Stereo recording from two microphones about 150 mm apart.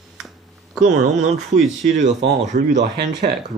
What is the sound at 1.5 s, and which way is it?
Speech, 55° right (ahead or behind).